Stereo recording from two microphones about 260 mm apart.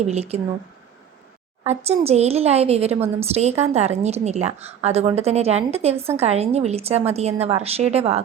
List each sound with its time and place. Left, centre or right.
0.1 s a woman's voice: right
1.6 s a woman's voice: right